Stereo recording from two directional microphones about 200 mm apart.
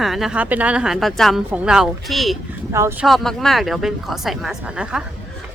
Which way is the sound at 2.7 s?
15° right (ahead or behind).